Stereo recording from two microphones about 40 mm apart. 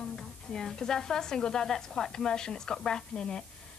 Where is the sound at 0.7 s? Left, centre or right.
Centre.